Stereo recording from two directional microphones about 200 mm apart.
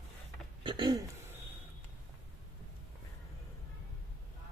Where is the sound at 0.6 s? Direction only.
25° right (ahead or behind).